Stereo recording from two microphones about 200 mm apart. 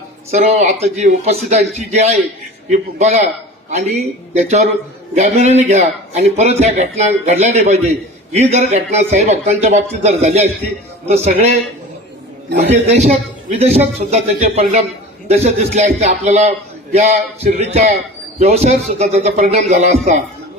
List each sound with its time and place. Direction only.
0.3 s a man's voice: 35° right (ahead or behind)
4.4 s a man's voice: 35° right (ahead or behind)
12.5 s a man's voice: 35° right (ahead or behind)